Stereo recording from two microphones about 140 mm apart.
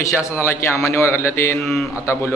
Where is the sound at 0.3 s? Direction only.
15° left (ahead or behind).